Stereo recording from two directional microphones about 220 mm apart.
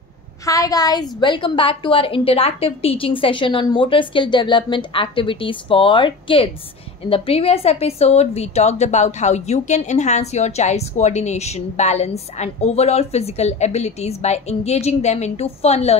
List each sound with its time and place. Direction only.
0.5 s a woman's voice: 15° left (ahead or behind)